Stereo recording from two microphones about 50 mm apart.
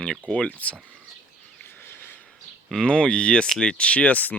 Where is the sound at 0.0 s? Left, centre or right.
Centre.